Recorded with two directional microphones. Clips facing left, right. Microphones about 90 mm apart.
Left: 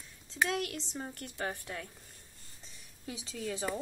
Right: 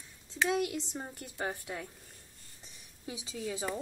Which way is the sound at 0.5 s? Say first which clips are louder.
Right 4 dB; 15° right (ahead or behind).